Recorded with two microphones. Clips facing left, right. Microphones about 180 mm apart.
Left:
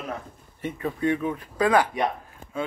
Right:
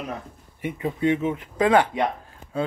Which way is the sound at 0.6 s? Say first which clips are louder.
Right 2 dB; 20° right (ahead or behind).